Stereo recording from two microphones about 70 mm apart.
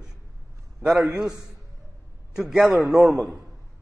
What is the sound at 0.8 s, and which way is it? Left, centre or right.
A man's voice, centre.